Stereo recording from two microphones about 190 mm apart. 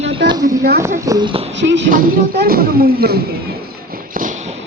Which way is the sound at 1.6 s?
70° right (ahead or behind).